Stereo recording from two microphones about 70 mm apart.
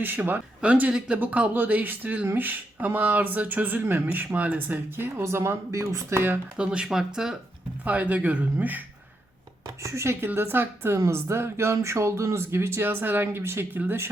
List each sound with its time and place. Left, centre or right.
0.0 s speech: right
6.6 s speech: centre
7.9 s speech: right
9.8 s speech: right